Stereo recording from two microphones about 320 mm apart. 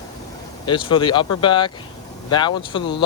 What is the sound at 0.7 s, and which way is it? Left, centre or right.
Speech, centre.